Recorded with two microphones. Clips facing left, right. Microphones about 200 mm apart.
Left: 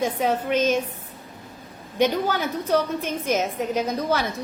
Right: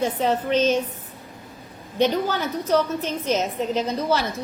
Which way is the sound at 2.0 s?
10° left (ahead or behind).